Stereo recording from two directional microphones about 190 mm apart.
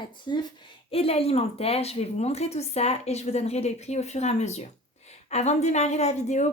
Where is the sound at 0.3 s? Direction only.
20° left (ahead or behind).